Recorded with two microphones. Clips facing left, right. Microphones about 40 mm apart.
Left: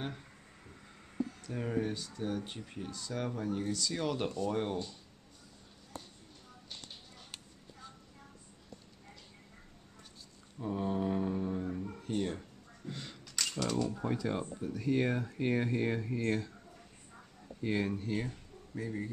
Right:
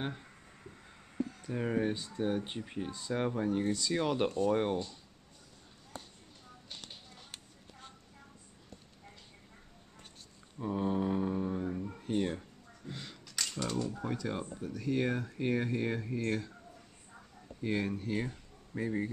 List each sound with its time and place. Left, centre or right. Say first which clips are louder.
1.4 s speech: right 4 dB; centre
10.6 s mantra: right 1 dB; centre
11.9 s a sound: right 3 dB; centre
13.6 s speech: left 2 dB; centre
13.9 s speech: left 2 dB; centre
17.6 s speech: even; centre
18.8 s speech: right 4 dB; right